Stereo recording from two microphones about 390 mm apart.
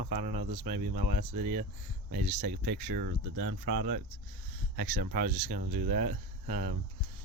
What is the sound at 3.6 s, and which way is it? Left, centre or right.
Speech, right.